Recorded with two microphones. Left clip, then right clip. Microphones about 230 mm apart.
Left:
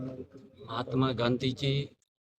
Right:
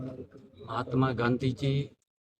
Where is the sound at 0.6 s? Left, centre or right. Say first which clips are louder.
Right 1 dB; centre.